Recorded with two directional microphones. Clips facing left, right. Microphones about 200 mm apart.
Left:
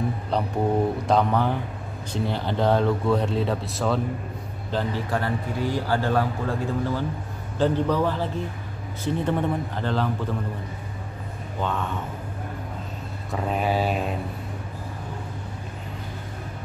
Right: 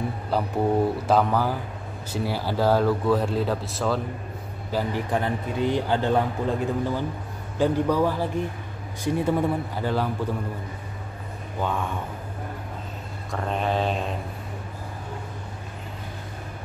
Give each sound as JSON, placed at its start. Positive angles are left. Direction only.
{"t": 0.3, "sound": "speech", "side_deg": -5}
{"t": 4.6, "sound": "a man's voice", "side_deg": -10}
{"t": 13.3, "sound": "mantra", "side_deg": 5}